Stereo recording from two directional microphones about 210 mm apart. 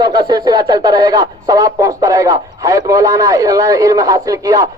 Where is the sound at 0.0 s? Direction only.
20° right (ahead or behind).